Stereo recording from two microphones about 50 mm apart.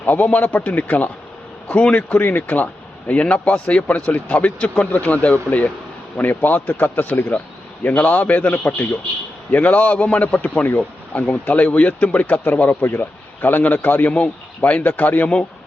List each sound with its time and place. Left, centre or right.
0.0 s speech: left
3.1 s speech: left
7.9 s speech: left
12.8 s speech: left
14.1 s speech: left